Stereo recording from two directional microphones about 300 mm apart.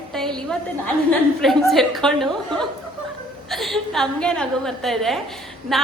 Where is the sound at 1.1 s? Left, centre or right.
Centre.